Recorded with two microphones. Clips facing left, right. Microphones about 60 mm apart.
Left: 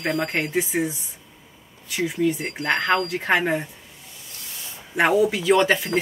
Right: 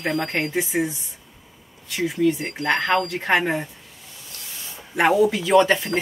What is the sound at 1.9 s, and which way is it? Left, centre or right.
Speech, centre.